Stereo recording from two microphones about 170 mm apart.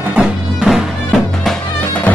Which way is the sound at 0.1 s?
5° right (ahead or behind).